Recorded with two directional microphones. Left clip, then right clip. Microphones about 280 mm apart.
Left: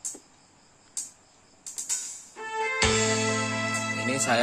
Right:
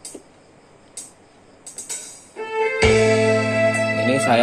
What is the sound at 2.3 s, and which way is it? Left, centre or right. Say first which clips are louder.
Music: right 7 dB; centre.